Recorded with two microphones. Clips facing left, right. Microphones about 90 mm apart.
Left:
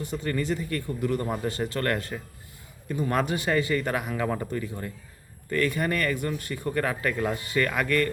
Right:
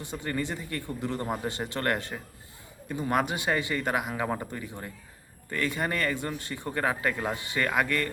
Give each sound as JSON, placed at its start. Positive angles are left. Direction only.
{"t": 0.0, "sound": "speech", "side_deg": -20}